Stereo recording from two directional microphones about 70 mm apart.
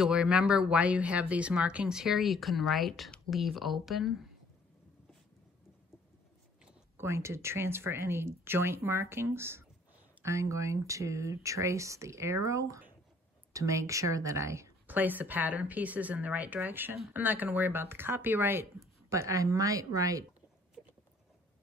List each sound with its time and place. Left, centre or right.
0.0 s speech: centre
1.9 s speech: centre
7.0 s speech: right
14.9 s a woman's voice: right
19.0 s speech: right